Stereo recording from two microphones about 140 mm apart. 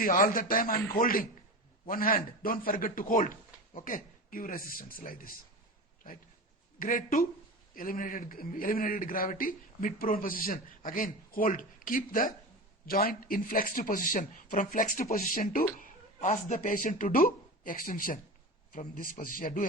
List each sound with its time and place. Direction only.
0.0 s a man's voice: 90° left
6.7 s a man's voice: 90° left; by 12.3 s 75° left (ahead or behind)
12.8 s a man's voice: 90° left
15.8 s a man's voice: 60° left (ahead or behind); by 19.6 s 90° left